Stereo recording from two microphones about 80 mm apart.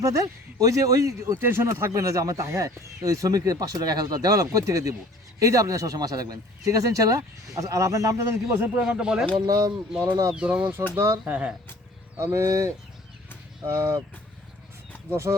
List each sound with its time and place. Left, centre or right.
0.0 s speech: right
8.9 s speech: centre
9.5 s speech: right
10.3 s speech: centre
10.9 s speech: right
11.3 s speech: right
12.2 s speech: right
15.1 s speech: right